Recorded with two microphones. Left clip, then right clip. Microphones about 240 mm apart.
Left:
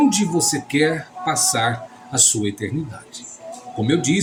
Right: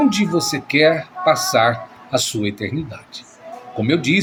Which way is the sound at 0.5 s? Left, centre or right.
Right.